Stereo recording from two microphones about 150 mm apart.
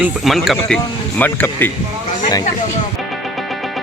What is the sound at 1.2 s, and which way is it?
Speech, 10° left (ahead or behind).